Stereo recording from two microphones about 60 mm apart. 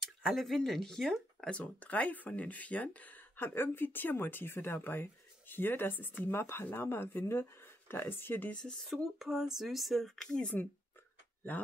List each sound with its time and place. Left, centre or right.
0.0 s speech: centre
1.5 s speech: left
8.5 s speech: centre
8.9 s speech: centre